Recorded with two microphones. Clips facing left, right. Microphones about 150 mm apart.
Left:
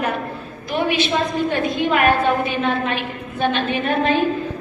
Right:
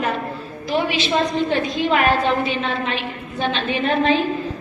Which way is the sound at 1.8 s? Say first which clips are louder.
Left 1 dB; 55° left (ahead or behind).